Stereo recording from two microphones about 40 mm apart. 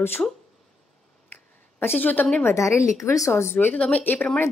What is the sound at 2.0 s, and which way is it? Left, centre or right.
Speech, left.